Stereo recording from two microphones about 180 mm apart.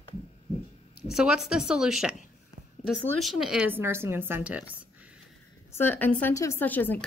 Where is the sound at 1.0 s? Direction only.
5° right (ahead or behind).